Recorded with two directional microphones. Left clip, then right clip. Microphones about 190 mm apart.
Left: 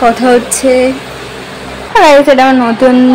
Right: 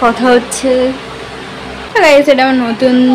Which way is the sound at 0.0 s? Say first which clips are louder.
Left 2 dB; 5° left (ahead or behind).